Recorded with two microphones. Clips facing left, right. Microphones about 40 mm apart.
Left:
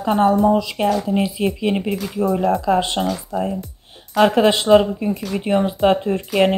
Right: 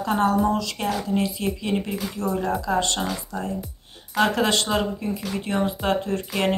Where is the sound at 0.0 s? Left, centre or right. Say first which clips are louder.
Left 5 dB; left.